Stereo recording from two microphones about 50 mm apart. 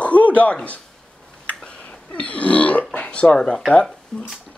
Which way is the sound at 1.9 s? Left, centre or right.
Left.